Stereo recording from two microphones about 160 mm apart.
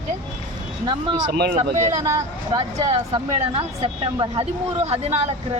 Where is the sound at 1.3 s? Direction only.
75° right (ahead or behind).